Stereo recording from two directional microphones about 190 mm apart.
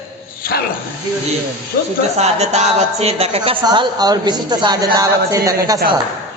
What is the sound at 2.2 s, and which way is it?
A woman's voice, 35° right (ahead or behind).